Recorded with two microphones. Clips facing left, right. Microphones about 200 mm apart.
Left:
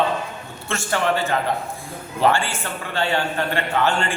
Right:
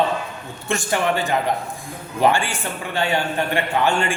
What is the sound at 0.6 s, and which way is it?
A man's voice, 15° right (ahead or behind).